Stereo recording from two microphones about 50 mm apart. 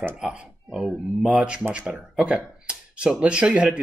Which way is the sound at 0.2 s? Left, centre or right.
Centre.